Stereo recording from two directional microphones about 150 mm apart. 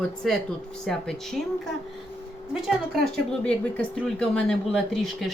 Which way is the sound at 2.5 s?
5° right (ahead or behind).